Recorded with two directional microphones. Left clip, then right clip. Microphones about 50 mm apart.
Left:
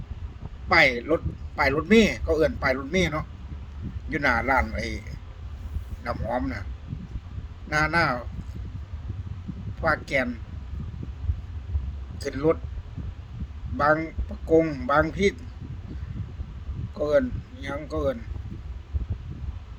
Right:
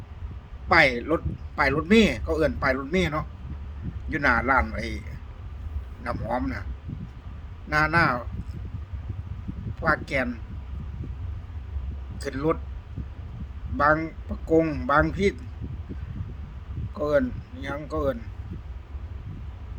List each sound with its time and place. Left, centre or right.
0.7 s a man's voice: centre
4.1 s speech: centre
7.7 s speech: centre
9.8 s speech: centre
12.2 s speech: centre
13.7 s speech: centre
14.0 s speech: centre
15.1 s speech: centre
16.9 s speech: centre